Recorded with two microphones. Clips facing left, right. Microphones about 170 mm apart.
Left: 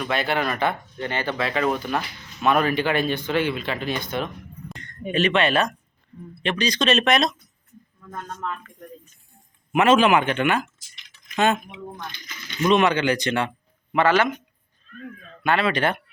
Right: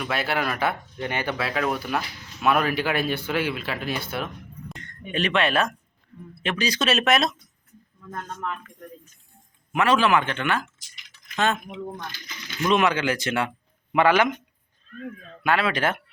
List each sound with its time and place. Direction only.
0.0 s speech: 5° right (ahead or behind)
4.7 s a sound: centre (ahead or behind)
5.1 s speech: centre (ahead or behind)
9.7 s speech: 20° left (ahead or behind)
12.5 s a man's voice: centre (ahead or behind)
15.4 s speech: 5° right (ahead or behind)